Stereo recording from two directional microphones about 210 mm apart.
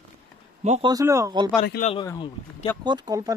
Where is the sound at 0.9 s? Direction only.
15° right (ahead or behind).